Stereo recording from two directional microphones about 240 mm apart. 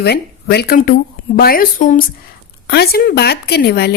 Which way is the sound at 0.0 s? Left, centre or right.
Left.